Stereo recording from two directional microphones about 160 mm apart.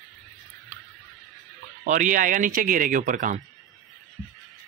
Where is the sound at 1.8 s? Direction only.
55° right (ahead or behind).